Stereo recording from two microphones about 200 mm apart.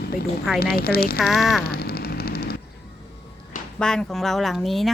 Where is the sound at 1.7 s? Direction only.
50° left (ahead or behind).